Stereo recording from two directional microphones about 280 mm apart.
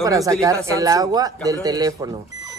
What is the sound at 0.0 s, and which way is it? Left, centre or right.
Speech, centre.